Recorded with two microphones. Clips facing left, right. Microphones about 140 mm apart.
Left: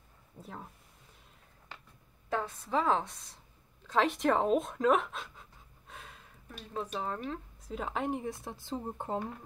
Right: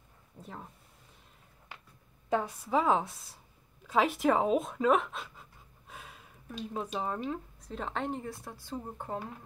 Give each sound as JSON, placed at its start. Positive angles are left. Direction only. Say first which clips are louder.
{"t": 0.4, "sound": "speech", "louder": "even", "side_deg": 0}
{"t": 2.2, "sound": "a woman's voice", "louder": "right 4 dB", "side_deg": -15}
{"t": 3.8, "sound": "pant", "louder": "right 1 dB", "side_deg": -5}
{"t": 6.7, "sound": "a woman's voice", "louder": "right 1 dB", "side_deg": -10}
{"t": 7.6, "sound": "speech", "louder": "left 2 dB", "side_deg": 5}